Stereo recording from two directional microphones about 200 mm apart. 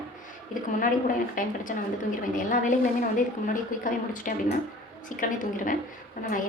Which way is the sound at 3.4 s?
40° left (ahead or behind).